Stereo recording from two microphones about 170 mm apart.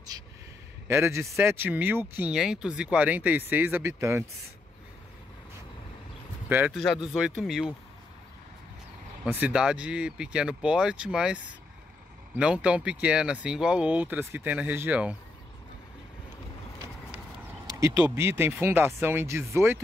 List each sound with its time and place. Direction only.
0.8 s speech: 15° right (ahead or behind)
6.5 s speech: 10° right (ahead or behind)
9.2 s speech: 10° right (ahead or behind)
17.7 s speech: 15° right (ahead or behind)